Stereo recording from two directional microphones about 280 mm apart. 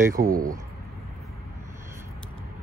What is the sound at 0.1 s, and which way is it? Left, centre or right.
Speech, right.